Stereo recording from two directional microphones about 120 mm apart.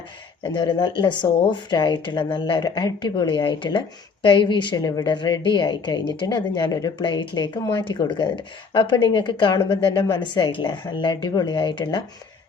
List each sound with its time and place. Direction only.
0.4 s speech: 40° left (ahead or behind)